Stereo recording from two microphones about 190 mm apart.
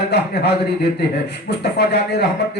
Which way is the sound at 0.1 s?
60° left (ahead or behind).